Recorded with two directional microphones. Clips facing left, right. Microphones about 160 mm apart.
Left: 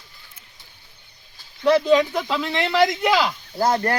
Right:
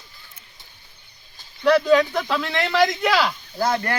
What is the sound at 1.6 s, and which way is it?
Speech, 25° left (ahead or behind).